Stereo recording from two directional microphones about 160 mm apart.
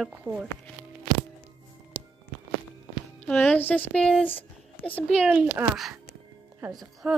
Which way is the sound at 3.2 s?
5° left (ahead or behind).